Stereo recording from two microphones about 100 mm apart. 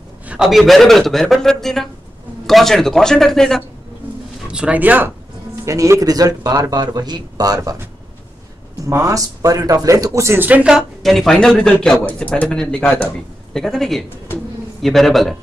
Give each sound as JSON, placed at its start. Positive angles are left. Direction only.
{"t": 0.3, "sound": "a man's voice", "side_deg": -5}
{"t": 4.5, "sound": "speech", "side_deg": -10}
{"t": 5.7, "sound": "speech", "side_deg": -35}
{"t": 8.8, "sound": "a man's voice", "side_deg": -30}